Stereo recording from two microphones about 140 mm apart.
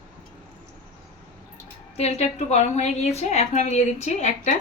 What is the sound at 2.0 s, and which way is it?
A woman's voice, 50° left (ahead or behind).